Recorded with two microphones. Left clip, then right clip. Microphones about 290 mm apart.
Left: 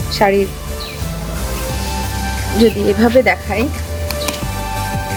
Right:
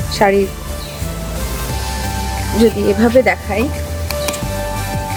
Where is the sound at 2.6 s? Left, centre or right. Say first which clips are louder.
Even; centre.